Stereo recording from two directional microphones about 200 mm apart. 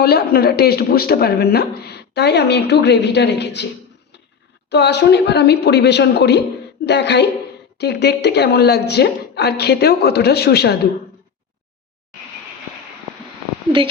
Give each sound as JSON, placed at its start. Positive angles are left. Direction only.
{"t": 0.0, "sound": "a woman's voice", "side_deg": 50}
{"t": 4.7, "sound": "a woman's voice", "side_deg": 60}